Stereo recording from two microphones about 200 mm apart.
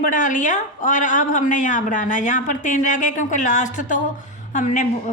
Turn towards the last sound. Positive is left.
turn(degrees=40)  # may be behind; listen again after turning